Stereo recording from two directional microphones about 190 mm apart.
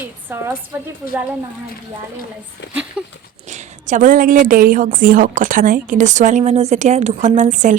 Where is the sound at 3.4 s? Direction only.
40° right (ahead or behind).